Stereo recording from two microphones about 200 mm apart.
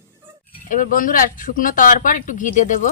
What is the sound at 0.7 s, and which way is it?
Speech, 40° left (ahead or behind).